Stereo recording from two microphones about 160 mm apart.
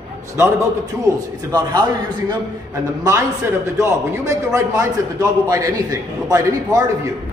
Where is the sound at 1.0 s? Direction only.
20° right (ahead or behind).